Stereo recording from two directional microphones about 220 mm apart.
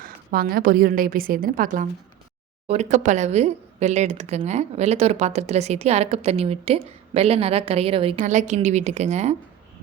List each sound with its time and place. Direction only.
0.0 s speech: 40° right (ahead or behind)